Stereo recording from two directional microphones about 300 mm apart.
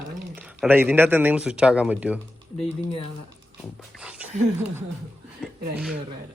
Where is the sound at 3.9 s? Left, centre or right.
Centre.